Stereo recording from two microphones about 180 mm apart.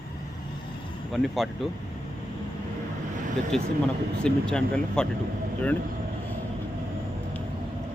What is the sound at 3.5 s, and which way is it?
Speech, centre (ahead or behind).